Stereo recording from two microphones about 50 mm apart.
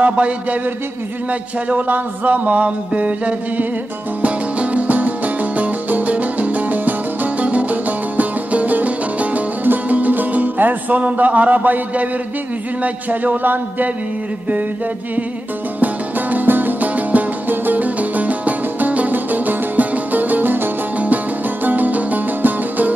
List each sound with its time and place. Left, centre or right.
0.0 s a sound: right
1.7 s music: right
15.8 s music: right